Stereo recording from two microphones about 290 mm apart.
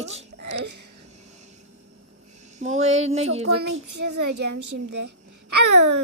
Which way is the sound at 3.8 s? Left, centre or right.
Right.